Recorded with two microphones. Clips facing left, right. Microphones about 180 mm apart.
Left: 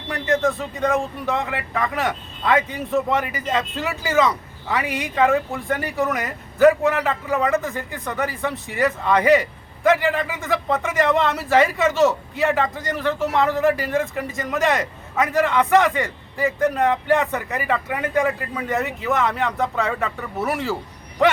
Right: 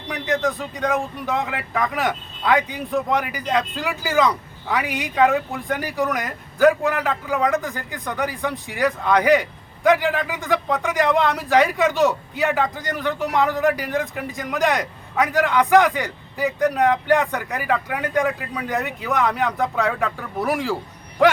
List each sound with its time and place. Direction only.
0.1 s speech: centre (ahead or behind)